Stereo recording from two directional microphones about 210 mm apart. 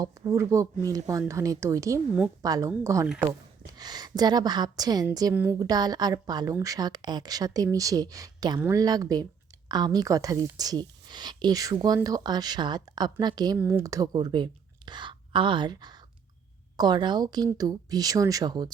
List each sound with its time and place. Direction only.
0.0 s a woman's voice: 15° right (ahead or behind)